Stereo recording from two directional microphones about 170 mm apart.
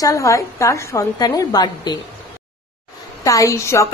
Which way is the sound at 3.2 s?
20° left (ahead or behind).